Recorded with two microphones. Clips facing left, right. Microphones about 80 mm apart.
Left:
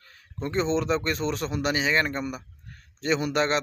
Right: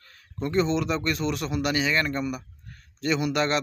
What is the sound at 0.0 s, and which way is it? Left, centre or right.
Speech, left.